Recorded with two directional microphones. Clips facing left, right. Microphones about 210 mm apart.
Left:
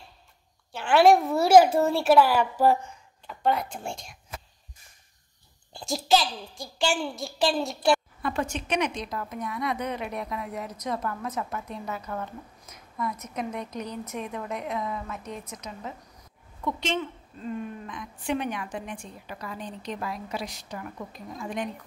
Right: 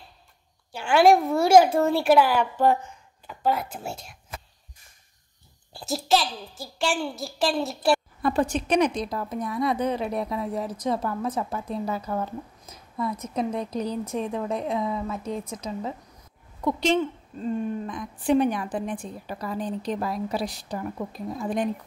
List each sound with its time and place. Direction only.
0.7 s speech: centre (ahead or behind)
5.7 s speech: centre (ahead or behind)
8.2 s a woman's voice: 35° right (ahead or behind)